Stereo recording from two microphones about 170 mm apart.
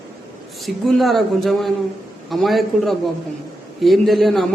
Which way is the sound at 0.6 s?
Centre (ahead or behind).